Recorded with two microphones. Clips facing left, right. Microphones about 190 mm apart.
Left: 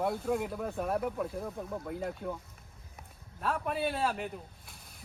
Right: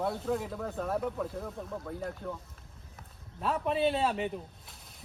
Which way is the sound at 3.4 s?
Centre (ahead or behind).